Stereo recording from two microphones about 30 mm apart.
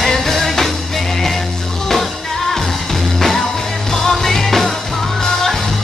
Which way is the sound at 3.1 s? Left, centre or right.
Centre.